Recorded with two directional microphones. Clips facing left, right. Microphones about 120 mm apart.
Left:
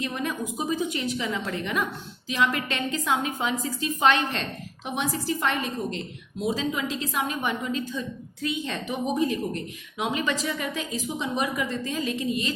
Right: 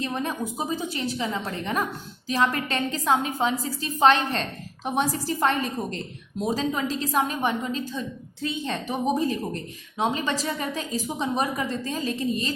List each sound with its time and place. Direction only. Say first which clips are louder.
0.0 s a woman's voice: right 1 dB; 35° right (ahead or behind)